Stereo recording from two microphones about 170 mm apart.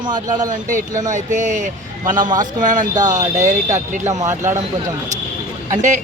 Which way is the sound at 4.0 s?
20° right (ahead or behind).